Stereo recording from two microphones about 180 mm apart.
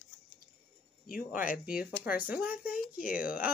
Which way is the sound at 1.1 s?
50° left (ahead or behind).